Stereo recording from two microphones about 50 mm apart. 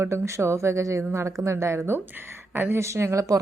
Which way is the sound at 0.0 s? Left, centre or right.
Right.